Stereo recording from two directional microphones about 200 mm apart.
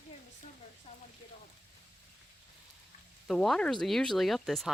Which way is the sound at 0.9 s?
30° left (ahead or behind).